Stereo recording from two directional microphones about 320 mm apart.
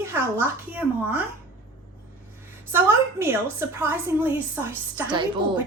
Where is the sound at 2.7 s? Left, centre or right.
Centre.